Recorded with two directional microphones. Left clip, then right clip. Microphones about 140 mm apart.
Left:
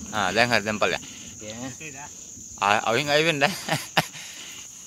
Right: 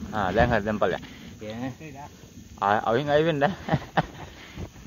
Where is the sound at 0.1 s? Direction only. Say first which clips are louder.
Left 1 dB; 40° left (ahead or behind).